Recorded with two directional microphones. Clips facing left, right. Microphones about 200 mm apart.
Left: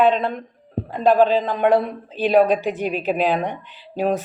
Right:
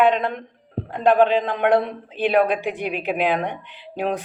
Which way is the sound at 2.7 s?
15° right (ahead or behind).